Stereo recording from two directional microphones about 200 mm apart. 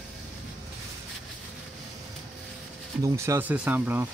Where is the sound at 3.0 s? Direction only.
15° right (ahead or behind).